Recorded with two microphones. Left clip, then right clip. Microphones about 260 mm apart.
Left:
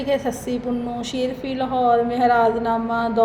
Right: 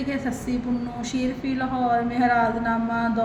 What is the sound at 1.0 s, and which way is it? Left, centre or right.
A woman's voice, left.